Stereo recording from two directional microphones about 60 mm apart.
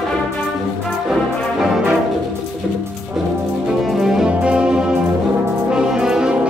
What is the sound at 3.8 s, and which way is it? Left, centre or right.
Music, centre.